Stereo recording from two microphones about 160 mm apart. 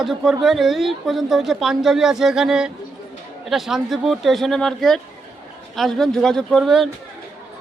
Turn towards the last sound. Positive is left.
turn(degrees=0)  # may be behind; listen again after turning